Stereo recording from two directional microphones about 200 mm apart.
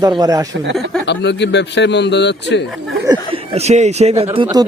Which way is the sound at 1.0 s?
60° left (ahead or behind).